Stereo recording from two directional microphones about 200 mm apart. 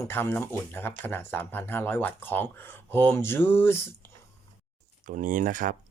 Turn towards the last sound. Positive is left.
turn(degrees=-40)  # may be behind; listen again after turning